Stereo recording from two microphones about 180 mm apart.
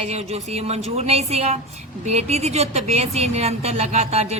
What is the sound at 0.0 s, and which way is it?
Speech, 35° right (ahead or behind).